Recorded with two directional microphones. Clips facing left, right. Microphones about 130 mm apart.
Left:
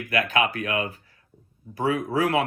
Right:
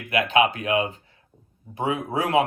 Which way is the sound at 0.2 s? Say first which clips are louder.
Right 4 dB; 25° right (ahead or behind).